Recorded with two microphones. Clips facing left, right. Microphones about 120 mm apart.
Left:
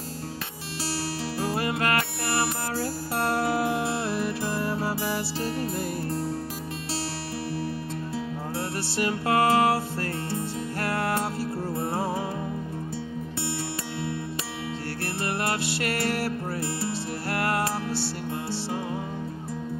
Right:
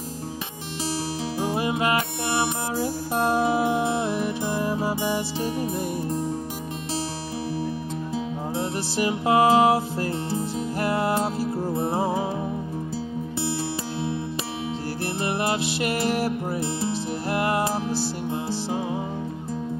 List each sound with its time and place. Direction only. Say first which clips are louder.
1.4 s music: right 3 dB; 15° right (ahead or behind)
4.0 s music: right 2 dB; 15° right (ahead or behind)
6.0 s music: right 2 dB; 15° right (ahead or behind)
8.5 s music: right 3 dB; 20° right (ahead or behind)
15.8 s music: right 4 dB; 20° right (ahead or behind)